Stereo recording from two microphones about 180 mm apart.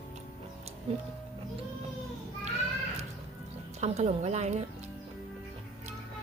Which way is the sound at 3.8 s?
35° right (ahead or behind).